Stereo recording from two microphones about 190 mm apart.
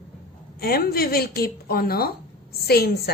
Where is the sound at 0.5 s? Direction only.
55° left (ahead or behind).